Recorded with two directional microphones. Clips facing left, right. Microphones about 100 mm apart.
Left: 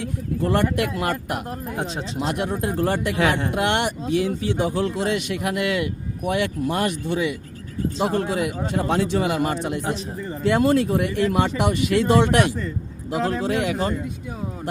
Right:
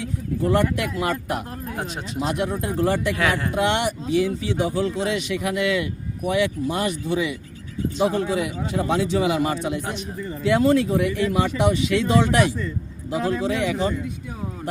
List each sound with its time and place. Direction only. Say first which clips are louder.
0.0 s speech: even; 60° left (ahead or behind)
1.5 s speech: left 2 dB; 25° left (ahead or behind)
2.1 s speech: right 1 dB; 55° left (ahead or behind)
3.2 s speech: left 2 dB; 25° left (ahead or behind)
3.5 s a man's voice: even; 60° left (ahead or behind)
9.8 s speech: left 2 dB; 30° left (ahead or behind)
10.4 s a man's voice: even; 50° left (ahead or behind)